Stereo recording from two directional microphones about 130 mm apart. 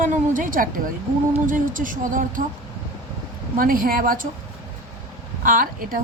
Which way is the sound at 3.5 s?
90° right.